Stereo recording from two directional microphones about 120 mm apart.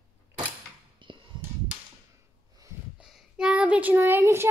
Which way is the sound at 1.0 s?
40° right (ahead or behind).